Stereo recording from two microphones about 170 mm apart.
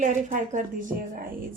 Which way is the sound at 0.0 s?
50° right (ahead or behind).